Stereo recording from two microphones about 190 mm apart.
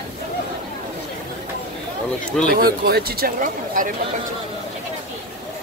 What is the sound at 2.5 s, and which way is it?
Speech, 55° right (ahead or behind).